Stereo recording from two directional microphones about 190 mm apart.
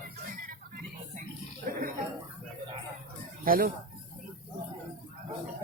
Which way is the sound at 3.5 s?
50° right (ahead or behind).